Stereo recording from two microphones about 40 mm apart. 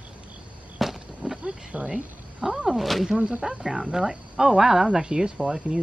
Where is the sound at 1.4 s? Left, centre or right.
Right.